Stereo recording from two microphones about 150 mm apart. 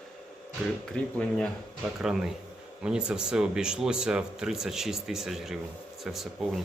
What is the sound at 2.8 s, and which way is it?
Speech, 5° right (ahead or behind).